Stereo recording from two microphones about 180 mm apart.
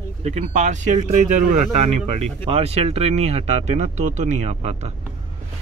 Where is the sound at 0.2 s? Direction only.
40° right (ahead or behind).